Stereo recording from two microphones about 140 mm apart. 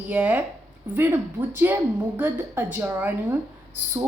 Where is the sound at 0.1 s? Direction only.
10° right (ahead or behind).